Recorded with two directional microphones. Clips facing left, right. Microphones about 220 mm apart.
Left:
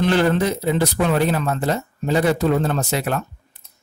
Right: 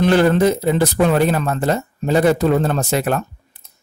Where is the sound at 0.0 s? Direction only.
45° right (ahead or behind).